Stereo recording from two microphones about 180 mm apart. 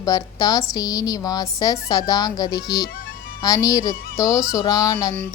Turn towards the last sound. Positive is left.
turn(degrees=20)  # may be behind; listen again after turning